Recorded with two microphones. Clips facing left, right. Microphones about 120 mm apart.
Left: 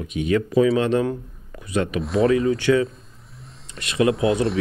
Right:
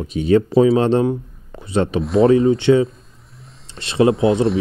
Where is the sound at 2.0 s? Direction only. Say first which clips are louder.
Right 5 dB; centre (ahead or behind).